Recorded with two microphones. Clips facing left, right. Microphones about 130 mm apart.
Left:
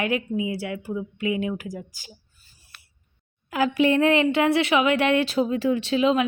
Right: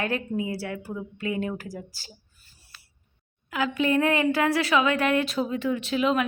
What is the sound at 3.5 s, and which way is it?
Speech, 35° left (ahead or behind).